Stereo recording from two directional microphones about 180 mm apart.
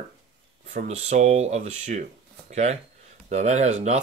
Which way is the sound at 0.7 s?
40° right (ahead or behind).